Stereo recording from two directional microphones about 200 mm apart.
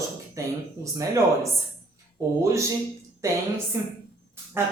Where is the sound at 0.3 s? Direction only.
15° right (ahead or behind).